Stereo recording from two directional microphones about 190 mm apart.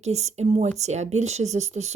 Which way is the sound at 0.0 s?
35° right (ahead or behind).